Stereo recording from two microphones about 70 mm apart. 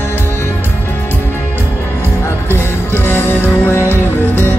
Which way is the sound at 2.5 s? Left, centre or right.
Left.